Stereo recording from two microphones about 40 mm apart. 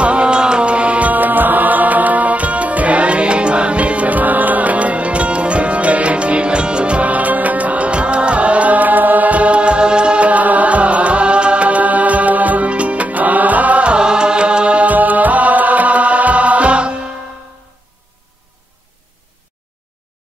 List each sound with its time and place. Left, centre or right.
0.0 s music: right
13.9 s music: right
14.9 s music: right